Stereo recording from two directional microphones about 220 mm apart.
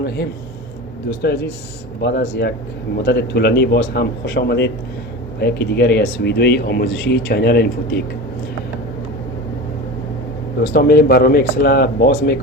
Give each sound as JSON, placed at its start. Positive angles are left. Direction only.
{"t": 1.2, "sound": "speech", "side_deg": 50}
{"t": 10.6, "sound": "speech", "side_deg": 45}